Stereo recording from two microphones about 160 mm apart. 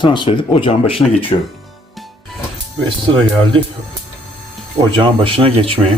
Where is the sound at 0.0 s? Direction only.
30° left (ahead or behind).